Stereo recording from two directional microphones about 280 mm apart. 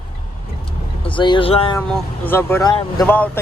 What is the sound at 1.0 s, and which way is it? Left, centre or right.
Speech, centre.